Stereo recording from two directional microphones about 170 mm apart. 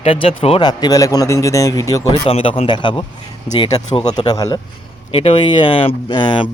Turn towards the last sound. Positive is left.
turn(degrees=25)  # may be behind; listen again after turning